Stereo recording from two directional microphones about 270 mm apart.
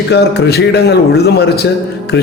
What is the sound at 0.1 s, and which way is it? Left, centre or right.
A man's voice, left.